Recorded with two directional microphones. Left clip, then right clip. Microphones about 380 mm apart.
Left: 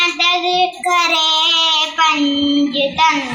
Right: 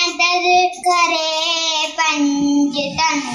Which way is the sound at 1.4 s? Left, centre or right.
Centre.